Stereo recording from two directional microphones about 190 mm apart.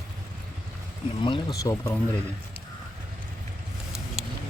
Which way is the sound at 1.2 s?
25° left (ahead or behind).